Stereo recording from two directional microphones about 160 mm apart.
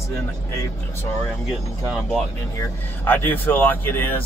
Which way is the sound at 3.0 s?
10° left (ahead or behind).